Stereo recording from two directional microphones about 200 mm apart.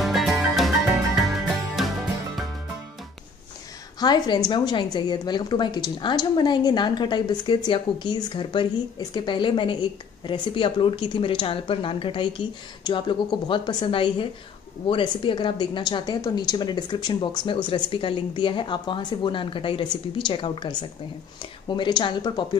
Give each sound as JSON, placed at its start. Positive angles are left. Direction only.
{"t": 0.0, "sound": "music", "side_deg": 0}
{"t": 4.0, "sound": "a woman's voice", "side_deg": 20}